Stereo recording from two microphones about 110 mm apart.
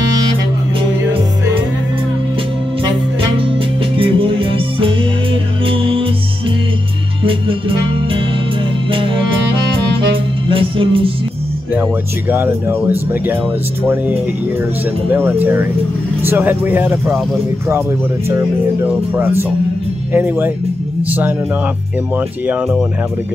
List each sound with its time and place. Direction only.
3.9 s music: 55° right (ahead or behind)
8.9 s music: 50° right (ahead or behind)
10.5 s music: 50° right (ahead or behind)
12.3 s speech: 20° right (ahead or behind)
15.0 s speech: 20° right (ahead or behind)
18.3 s speech: 20° right (ahead or behind)